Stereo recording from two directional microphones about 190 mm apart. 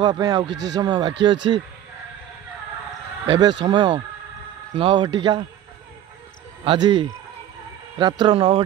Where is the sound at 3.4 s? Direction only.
25° right (ahead or behind).